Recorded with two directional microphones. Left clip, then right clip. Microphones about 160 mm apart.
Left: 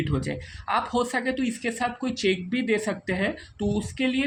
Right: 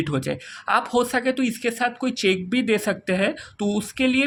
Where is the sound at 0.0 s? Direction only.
45° right (ahead or behind).